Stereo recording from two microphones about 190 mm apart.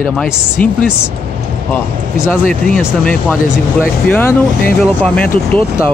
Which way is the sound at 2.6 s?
5° left (ahead or behind).